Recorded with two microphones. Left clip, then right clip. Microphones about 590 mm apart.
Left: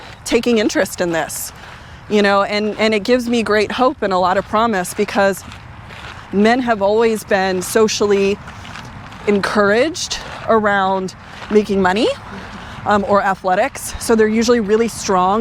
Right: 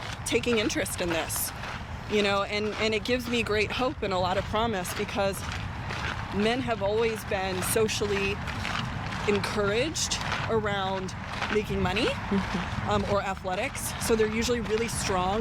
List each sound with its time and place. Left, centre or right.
0.3 s speech: left
6.4 s speech: left
9.2 s speech: left
12.9 s speech: left